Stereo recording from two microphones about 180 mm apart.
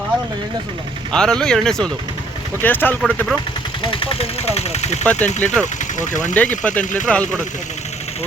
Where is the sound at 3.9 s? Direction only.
30° left (ahead or behind).